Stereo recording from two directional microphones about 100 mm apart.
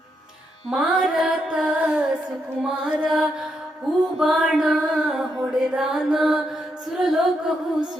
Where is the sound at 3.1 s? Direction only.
5° right (ahead or behind).